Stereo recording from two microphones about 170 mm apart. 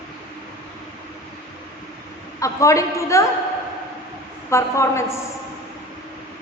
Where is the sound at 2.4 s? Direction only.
20° left (ahead or behind).